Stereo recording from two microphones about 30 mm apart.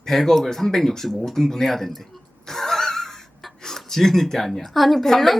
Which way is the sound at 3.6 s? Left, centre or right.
Centre.